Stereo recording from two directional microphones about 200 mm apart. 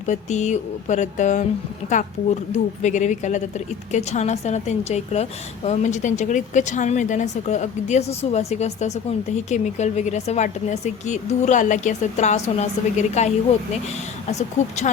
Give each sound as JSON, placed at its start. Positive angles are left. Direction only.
{"t": 0.0, "sound": "a woman's voice", "side_deg": 35}